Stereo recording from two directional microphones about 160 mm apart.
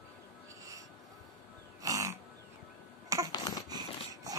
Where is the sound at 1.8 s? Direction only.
20° right (ahead or behind).